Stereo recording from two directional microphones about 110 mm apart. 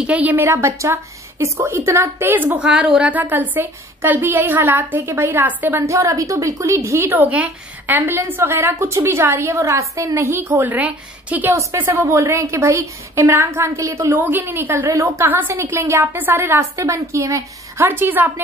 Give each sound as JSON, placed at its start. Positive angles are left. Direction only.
{"t": 0.0, "sound": "a woman's voice", "side_deg": -15}